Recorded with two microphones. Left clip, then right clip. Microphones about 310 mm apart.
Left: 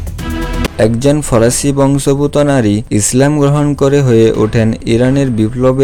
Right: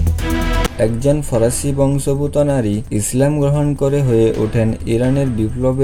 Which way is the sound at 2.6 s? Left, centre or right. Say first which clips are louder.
Left 7 dB; left.